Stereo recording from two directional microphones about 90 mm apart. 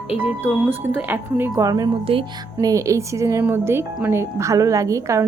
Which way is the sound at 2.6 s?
35° right (ahead or behind).